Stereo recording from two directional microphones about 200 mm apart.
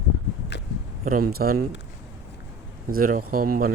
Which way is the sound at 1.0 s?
45° right (ahead or behind).